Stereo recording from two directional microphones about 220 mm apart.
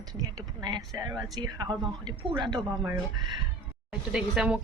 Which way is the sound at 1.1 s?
20° right (ahead or behind).